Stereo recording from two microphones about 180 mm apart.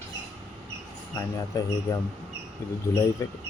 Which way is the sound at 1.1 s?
20° left (ahead or behind).